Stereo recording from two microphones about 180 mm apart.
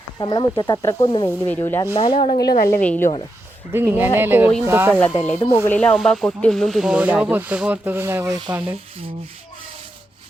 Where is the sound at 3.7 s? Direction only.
10° right (ahead or behind).